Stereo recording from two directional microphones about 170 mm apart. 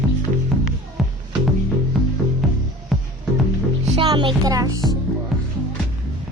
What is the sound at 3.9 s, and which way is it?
Speech, 30° right (ahead or behind).